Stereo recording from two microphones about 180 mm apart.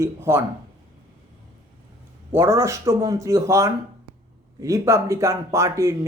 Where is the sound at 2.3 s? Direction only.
15° right (ahead or behind).